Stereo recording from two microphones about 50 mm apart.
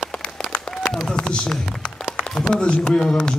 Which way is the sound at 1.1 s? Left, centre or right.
Centre.